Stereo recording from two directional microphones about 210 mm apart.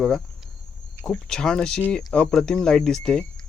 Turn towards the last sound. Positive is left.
turn(degrees=5)  # may be behind; listen again after turning